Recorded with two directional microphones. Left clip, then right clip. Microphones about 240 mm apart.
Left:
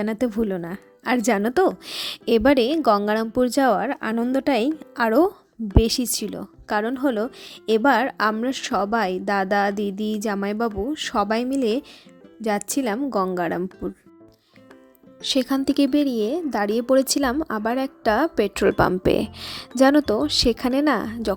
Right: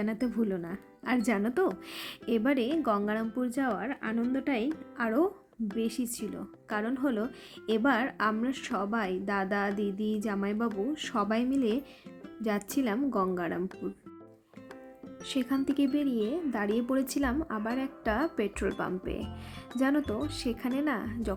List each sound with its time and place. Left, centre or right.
0.0 s a woman's voice: left
15.2 s a woman's voice: left